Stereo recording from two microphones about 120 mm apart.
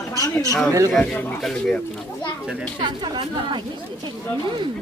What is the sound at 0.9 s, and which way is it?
Speech, 5° left (ahead or behind).